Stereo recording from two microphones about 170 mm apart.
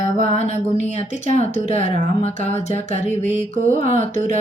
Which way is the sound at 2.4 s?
40° left (ahead or behind).